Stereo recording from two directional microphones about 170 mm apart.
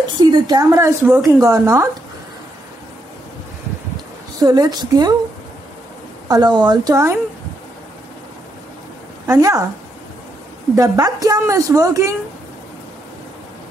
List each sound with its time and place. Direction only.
0.1 s speech: 25° right (ahead or behind)
4.4 s speech: 25° right (ahead or behind)
6.2 s speech: 25° right (ahead or behind)
9.3 s speech: 20° right (ahead or behind)
10.8 s speech: 20° right (ahead or behind)